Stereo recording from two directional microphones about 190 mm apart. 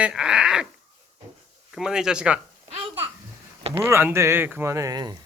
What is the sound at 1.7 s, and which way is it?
Speech, 5° right (ahead or behind).